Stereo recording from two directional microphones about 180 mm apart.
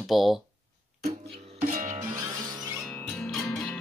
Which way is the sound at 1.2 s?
55° right (ahead or behind).